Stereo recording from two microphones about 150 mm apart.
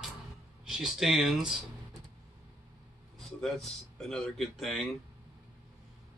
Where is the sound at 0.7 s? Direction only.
5° right (ahead or behind).